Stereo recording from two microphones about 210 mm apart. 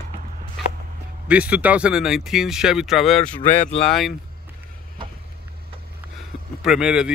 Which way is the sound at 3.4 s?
35° left (ahead or behind).